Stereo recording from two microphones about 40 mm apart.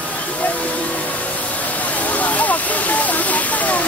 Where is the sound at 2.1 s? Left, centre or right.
Left.